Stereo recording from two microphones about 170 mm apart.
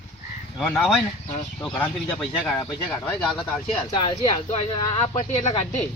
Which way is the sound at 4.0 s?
30° left (ahead or behind).